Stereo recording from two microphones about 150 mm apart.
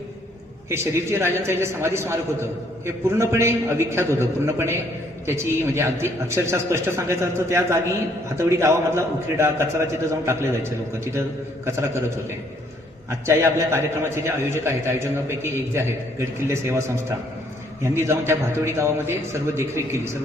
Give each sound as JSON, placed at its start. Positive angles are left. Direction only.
{"t": 0.7, "sound": "a man's voice", "side_deg": -15}
{"t": 13.1, "sound": "a man's voice", "side_deg": -20}